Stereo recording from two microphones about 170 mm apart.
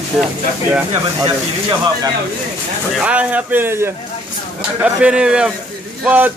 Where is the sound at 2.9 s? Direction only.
5° right (ahead or behind).